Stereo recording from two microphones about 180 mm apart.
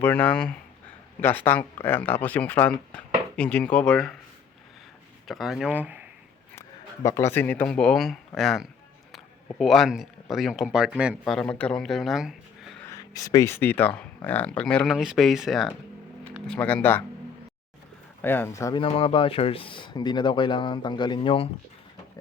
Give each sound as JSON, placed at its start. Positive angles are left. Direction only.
{"t": 0.0, "sound": "speech", "side_deg": 10}
{"t": 5.3, "sound": "speech", "side_deg": 0}
{"t": 6.6, "sound": "speech", "side_deg": 15}
{"t": 11.3, "sound": "speech", "side_deg": 5}
{"t": 12.8, "sound": "speech", "side_deg": 20}
{"t": 18.2, "sound": "speech", "side_deg": 10}
{"t": 18.8, "sound": "speech", "side_deg": 30}